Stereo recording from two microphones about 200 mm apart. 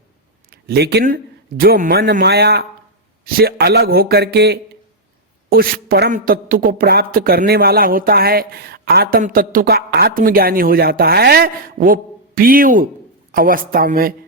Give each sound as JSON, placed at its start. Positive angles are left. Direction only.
{"t": 0.5, "sound": "a woman's voice", "side_deg": -55}